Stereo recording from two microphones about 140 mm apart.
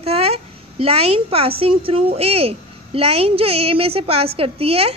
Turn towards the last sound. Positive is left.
turn(degrees=-45)  # may be behind; listen again after turning